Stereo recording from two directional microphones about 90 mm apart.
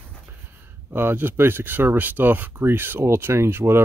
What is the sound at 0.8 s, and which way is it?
Speech, 25° right (ahead or behind).